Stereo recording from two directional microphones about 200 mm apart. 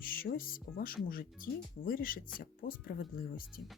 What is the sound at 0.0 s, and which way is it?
Speech, 45° left (ahead or behind).